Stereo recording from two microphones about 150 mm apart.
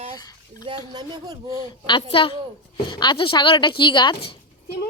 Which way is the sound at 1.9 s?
35° left (ahead or behind).